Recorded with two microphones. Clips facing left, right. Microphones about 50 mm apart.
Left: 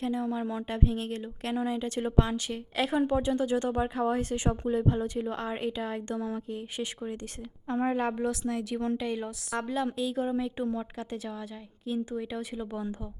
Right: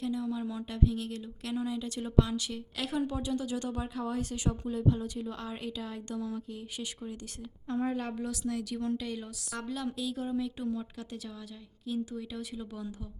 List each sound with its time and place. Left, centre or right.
0.0 s speech: left